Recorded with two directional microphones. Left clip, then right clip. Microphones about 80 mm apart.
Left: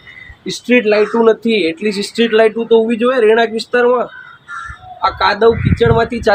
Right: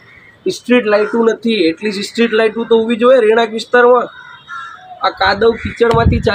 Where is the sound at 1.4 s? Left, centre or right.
Centre.